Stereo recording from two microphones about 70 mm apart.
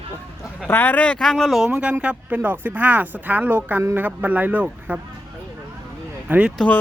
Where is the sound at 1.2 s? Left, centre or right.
Centre.